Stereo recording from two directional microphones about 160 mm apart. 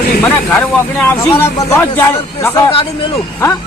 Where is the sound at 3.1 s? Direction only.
20° left (ahead or behind).